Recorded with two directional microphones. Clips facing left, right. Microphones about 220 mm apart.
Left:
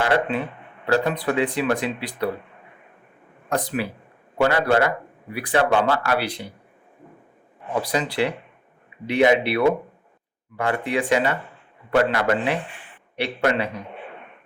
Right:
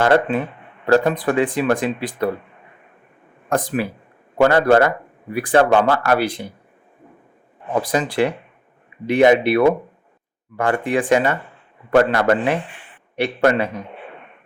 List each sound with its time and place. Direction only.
0.0 s speech: 50° right (ahead or behind)
3.5 s speech: 50° right (ahead or behind)
7.7 s speech: 50° right (ahead or behind)